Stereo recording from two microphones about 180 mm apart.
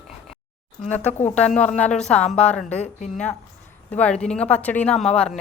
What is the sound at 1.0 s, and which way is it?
Speech, 40° left (ahead or behind).